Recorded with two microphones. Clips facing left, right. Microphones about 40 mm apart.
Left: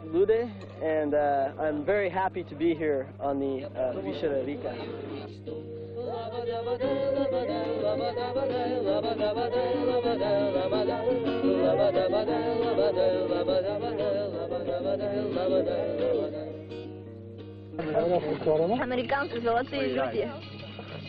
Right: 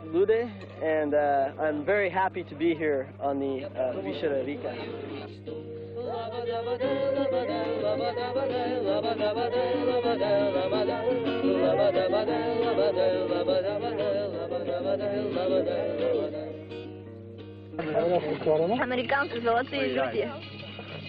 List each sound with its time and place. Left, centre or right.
0.4 s a capella: right
2.9 s speech: centre
3.3 s a capella: right
6.0 s a capella: right
9.5 s music: right
17.7 s a capella: right